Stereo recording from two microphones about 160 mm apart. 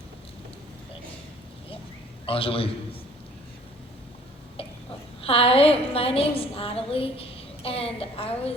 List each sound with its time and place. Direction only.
2.2 s a woman's voice: 35° left (ahead or behind)
5.2 s a woman's voice: 35° left (ahead or behind)